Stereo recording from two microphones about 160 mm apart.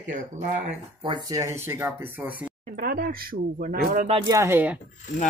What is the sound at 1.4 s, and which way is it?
Speech, 15° right (ahead or behind).